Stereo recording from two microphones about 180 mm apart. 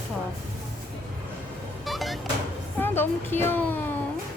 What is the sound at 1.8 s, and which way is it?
Music, centre (ahead or behind).